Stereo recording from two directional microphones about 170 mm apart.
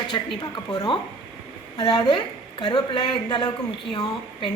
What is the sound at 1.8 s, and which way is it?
A woman's voice, 25° left (ahead or behind).